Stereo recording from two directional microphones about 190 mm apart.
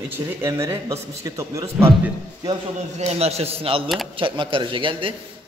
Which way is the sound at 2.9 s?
35° right (ahead or behind).